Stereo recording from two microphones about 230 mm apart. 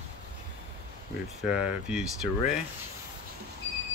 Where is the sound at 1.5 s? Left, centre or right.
Centre.